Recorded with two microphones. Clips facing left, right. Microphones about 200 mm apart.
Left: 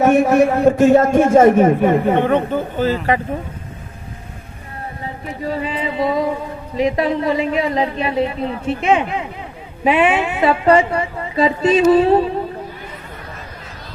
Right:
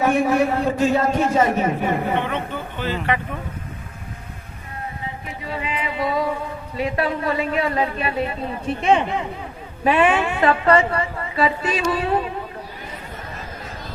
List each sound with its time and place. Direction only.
0.0 s a man's voice: 45° left (ahead or behind)
5.4 s a man's voice: 40° left (ahead or behind); by 8.2 s 25° left (ahead or behind)
8.8 s speech: 5° left (ahead or behind)
9.8 s a woman's voice: 15° left (ahead or behind)